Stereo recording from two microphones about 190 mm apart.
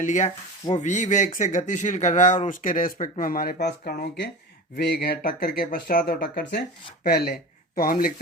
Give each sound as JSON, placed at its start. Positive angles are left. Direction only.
{"t": 0.0, "sound": "speech", "side_deg": 40}